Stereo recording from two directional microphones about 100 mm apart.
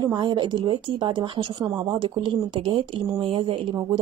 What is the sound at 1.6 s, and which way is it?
Speech, 40° right (ahead or behind).